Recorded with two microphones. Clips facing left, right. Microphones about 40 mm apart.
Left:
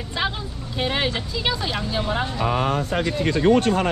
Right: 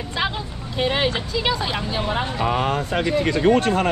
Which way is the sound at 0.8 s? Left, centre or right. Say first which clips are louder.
Right 3 dB; centre.